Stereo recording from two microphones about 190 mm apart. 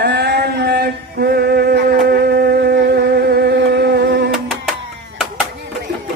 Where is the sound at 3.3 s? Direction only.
55° right (ahead or behind).